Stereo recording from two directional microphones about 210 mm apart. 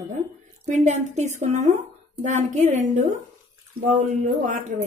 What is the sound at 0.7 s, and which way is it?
Speech, 35° right (ahead or behind).